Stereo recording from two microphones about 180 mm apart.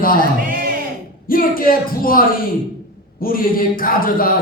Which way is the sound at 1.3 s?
55° left (ahead or behind).